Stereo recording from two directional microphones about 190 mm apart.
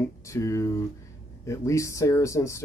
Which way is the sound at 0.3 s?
15° left (ahead or behind).